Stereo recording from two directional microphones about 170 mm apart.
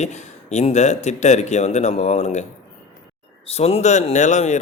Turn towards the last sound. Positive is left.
turn(degrees=45)  # may be behind; listen again after turning